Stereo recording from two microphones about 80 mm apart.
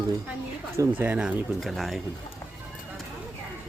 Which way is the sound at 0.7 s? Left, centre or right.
Right.